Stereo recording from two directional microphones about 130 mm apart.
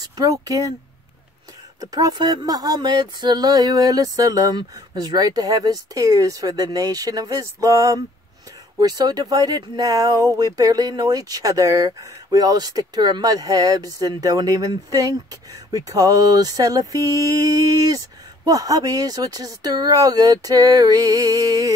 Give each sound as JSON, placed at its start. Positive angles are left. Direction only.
{"t": 0.0, "sound": "speech", "side_deg": -25}
{"t": 1.8, "sound": "speech", "side_deg": -25}